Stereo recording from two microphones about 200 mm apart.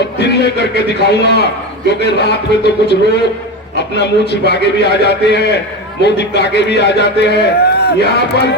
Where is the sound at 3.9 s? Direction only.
60° left (ahead or behind).